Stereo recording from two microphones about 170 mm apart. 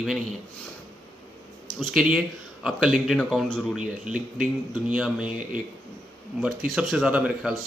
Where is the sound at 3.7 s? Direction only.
5° right (ahead or behind).